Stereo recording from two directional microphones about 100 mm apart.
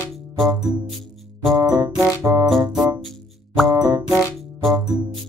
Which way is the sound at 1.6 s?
35° right (ahead or behind).